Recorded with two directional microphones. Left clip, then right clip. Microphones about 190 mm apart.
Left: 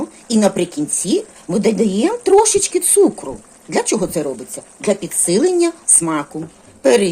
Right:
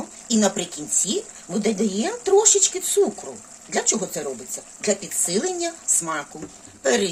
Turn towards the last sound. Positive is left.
turn(degrees=30)  # may be behind; listen again after turning